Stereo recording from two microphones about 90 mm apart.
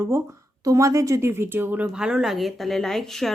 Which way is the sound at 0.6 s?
35° right (ahead or behind).